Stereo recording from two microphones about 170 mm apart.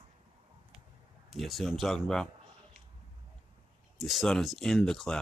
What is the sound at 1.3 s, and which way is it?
Speech, centre (ahead or behind).